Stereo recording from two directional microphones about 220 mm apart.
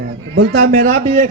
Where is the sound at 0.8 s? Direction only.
35° right (ahead or behind).